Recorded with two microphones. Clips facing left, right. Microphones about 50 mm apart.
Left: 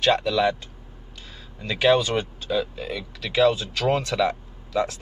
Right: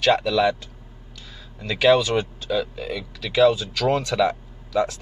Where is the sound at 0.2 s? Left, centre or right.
Centre.